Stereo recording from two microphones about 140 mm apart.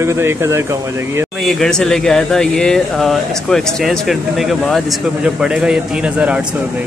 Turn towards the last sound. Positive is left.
turn(degrees=-10)  # may be behind; listen again after turning